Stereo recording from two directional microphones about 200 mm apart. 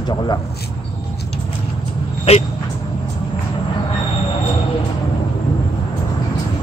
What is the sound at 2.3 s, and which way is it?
Speech, 30° left (ahead or behind).